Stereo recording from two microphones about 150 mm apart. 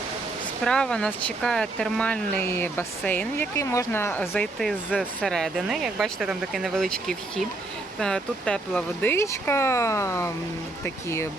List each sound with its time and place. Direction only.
0.6 s speech: 5° left (ahead or behind)
4.2 s speech: centre (ahead or behind); by 11.3 s 15° left (ahead or behind)